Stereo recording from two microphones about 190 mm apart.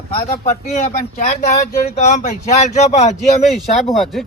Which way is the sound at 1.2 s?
35° left (ahead or behind).